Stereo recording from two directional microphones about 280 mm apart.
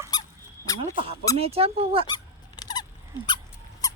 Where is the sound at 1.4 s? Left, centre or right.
Right.